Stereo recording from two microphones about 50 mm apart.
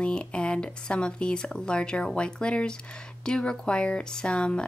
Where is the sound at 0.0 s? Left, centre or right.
Left.